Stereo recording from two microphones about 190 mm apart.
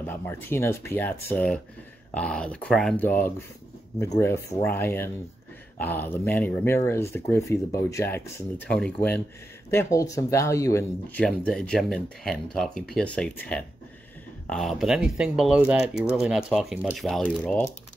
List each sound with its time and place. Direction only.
0.0 s speech: 10° left (ahead or behind)
11.2 s speech: 5° left (ahead or behind)